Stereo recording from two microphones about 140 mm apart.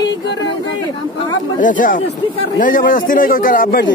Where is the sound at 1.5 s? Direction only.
70° left (ahead or behind).